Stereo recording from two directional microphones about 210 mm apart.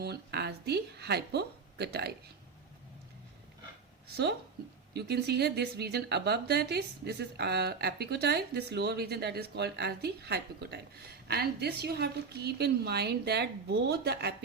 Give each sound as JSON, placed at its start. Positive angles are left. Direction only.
{"t": 0.0, "sound": "speech", "side_deg": -50}
{"t": 4.9, "sound": "a woman's voice", "side_deg": -50}